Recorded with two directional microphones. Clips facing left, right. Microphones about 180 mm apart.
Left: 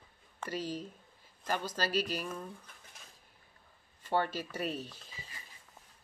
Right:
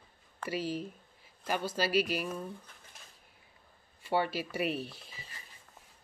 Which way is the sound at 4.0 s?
10° right (ahead or behind).